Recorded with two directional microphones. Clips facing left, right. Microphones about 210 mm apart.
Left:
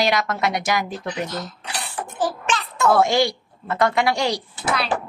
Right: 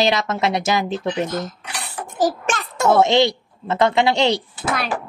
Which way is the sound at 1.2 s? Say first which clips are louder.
Right 4 dB; 50° right (ahead or behind).